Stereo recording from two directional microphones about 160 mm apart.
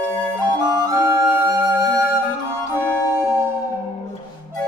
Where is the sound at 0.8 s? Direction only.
15° right (ahead or behind).